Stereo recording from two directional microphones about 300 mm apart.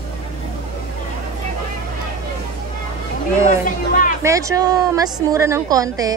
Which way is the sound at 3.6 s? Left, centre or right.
Left.